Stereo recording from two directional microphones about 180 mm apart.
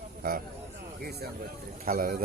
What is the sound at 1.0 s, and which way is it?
A man's voice, 60° right (ahead or behind).